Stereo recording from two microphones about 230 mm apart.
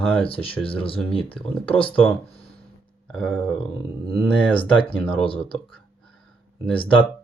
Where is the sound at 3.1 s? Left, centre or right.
Centre.